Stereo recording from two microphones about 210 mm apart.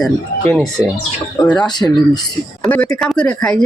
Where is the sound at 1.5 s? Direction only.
20° left (ahead or behind).